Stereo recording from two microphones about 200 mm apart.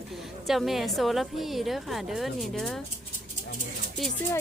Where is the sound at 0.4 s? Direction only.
Centre (ahead or behind).